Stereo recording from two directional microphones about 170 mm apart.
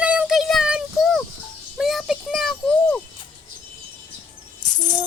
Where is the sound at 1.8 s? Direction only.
Centre (ahead or behind).